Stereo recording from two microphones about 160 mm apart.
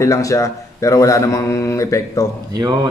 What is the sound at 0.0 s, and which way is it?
Speech, 20° left (ahead or behind).